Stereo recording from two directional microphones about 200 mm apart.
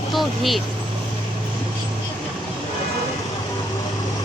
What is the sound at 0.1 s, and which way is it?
Vehicle, centre (ahead or behind).